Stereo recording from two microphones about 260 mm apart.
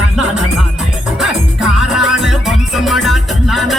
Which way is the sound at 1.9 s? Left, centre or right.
Centre.